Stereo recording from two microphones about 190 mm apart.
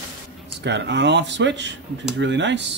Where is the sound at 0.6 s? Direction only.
65° right (ahead or behind).